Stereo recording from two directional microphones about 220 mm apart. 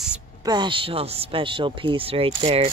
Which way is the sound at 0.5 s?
20° right (ahead or behind).